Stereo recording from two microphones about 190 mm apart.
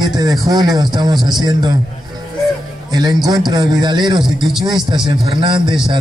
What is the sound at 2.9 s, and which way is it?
A man's voice, 20° right (ahead or behind).